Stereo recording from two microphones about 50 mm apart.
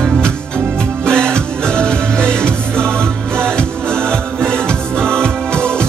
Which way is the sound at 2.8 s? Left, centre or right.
Right.